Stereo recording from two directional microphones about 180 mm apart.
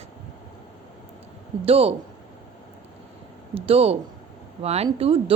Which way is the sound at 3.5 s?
30° right (ahead or behind).